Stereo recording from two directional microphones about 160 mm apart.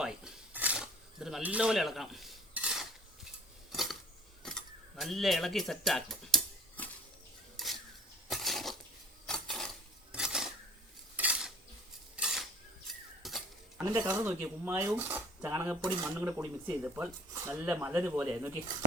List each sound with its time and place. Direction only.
0.0 s dishes: 5° right (ahead or behind)
3.7 s a sound: centre (ahead or behind)
8.3 s dishes: centre (ahead or behind)
9.2 s a sound: centre (ahead or behind)
11.2 s cutlery: 5° right (ahead or behind)
12.1 s dishes: 5° right (ahead or behind)
13.2 s cutlery: centre (ahead or behind)
13.7 s speech: 20° right (ahead or behind)